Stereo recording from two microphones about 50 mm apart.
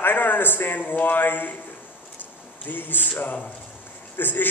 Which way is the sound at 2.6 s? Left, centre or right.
Left.